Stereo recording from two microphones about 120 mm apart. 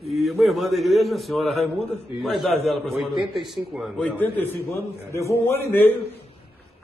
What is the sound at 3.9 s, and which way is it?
Speech, 10° left (ahead or behind).